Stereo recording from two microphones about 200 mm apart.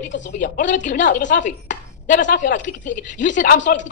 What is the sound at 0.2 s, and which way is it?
Speech, 40° left (ahead or behind).